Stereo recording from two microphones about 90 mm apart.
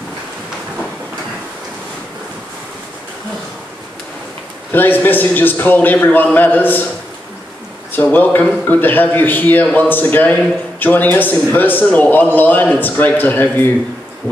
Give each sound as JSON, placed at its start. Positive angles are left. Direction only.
{"t": 4.7, "sound": "a man's voice", "side_deg": 20}
{"t": 7.9, "sound": "a man's voice", "side_deg": 20}